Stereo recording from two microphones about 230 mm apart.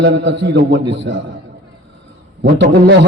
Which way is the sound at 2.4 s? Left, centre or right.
Right.